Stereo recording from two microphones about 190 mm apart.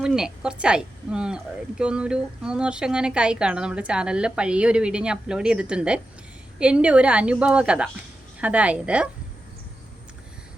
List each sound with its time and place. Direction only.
0.0 s a woman's voice: 5° right (ahead or behind)